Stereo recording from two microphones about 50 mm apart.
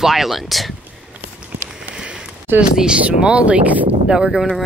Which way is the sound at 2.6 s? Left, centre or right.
Centre.